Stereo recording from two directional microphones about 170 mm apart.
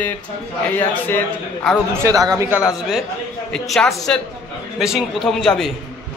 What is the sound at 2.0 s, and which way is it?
Speech, 20° right (ahead or behind).